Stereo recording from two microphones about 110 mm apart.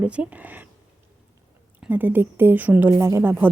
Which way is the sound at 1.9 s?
15° right (ahead or behind).